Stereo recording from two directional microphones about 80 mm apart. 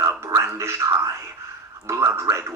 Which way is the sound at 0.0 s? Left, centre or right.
Right.